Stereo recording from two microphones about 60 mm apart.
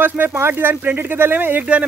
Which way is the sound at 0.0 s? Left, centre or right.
Right.